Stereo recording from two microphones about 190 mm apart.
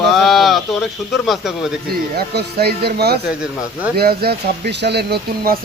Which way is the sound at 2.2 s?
55° right (ahead or behind).